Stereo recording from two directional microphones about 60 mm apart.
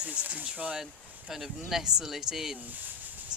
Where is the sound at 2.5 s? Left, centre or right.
Right.